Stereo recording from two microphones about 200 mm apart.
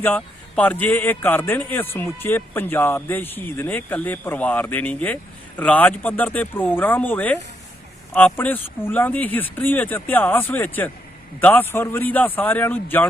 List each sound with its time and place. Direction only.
0.0 s a man's voice: 10° left (ahead or behind)